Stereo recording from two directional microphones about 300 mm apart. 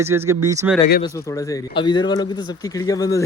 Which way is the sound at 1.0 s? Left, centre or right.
Centre.